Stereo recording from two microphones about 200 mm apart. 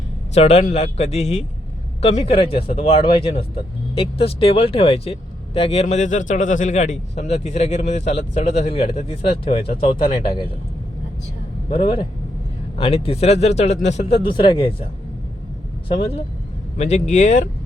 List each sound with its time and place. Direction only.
0.3 s a man's voice: 30° left (ahead or behind)
11.7 s a man's voice: 25° left (ahead or behind)
15.9 s speech: 30° left (ahead or behind)